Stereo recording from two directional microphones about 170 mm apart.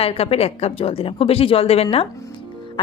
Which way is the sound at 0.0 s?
35° left (ahead or behind).